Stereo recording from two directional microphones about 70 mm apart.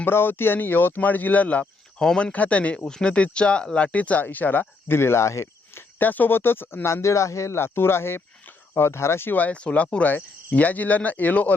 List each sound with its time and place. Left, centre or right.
0.0 s speech: left
4.9 s speech: left
6.0 s speech: left